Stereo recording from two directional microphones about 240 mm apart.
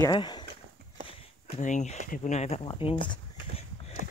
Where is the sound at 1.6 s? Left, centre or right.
Left.